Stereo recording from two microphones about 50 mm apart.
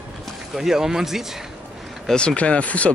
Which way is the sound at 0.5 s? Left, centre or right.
Centre.